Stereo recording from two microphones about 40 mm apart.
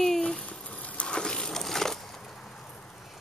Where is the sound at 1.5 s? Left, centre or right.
Centre.